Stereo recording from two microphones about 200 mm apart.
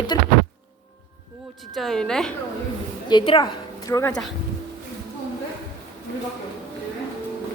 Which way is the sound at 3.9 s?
15° left (ahead or behind).